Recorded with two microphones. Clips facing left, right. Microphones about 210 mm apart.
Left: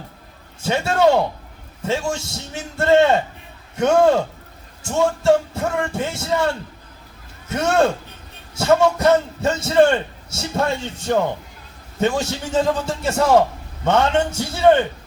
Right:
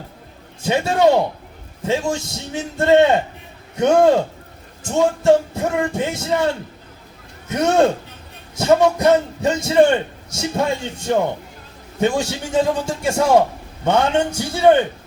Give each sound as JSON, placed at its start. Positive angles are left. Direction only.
{"t": 0.6, "sound": "a man's voice", "side_deg": -15}
{"t": 7.5, "sound": "a man's voice", "side_deg": -15}